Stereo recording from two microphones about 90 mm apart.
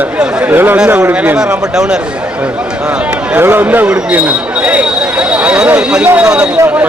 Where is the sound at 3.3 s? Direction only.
20° right (ahead or behind).